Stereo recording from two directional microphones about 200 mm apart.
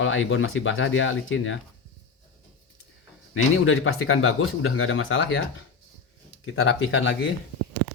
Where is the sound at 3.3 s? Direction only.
80° left.